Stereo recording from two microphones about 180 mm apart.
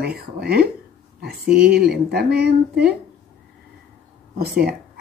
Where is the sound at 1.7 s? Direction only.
60° right (ahead or behind).